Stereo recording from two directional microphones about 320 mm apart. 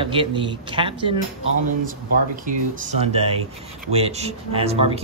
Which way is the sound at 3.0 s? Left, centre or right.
Centre.